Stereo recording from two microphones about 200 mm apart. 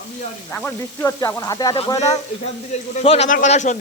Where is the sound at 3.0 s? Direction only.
35° left (ahead or behind).